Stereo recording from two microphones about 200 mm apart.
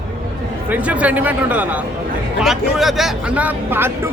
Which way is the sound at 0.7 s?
5° right (ahead or behind).